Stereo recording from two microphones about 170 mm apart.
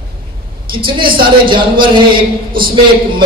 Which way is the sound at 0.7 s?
30° right (ahead or behind).